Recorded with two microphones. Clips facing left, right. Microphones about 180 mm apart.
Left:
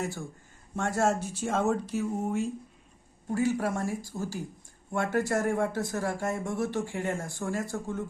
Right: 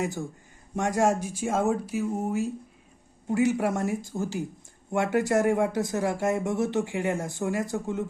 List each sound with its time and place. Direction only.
0.0 s speech: 20° right (ahead or behind)
3.2 s speech: 20° right (ahead or behind)